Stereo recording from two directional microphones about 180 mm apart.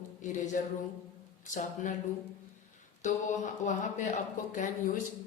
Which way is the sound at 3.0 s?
45° left (ahead or behind).